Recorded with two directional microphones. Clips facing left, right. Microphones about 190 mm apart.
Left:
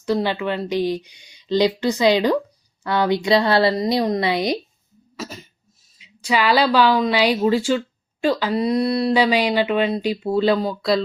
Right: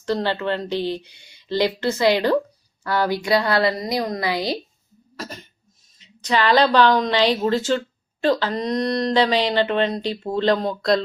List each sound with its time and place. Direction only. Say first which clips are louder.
0.0 s a woman's voice: left 2 dB; 10° left (ahead or behind)
5.1 s cough: left 2 dB; 5° left (ahead or behind)
6.0 s speech: even; 10° left (ahead or behind)